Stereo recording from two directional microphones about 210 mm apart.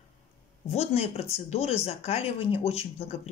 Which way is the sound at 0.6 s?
30° left (ahead or behind).